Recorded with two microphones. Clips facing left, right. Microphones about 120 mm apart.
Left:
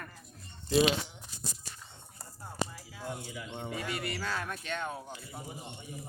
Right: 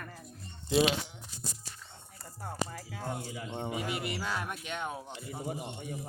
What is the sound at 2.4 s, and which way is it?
Music, 55° right (ahead or behind).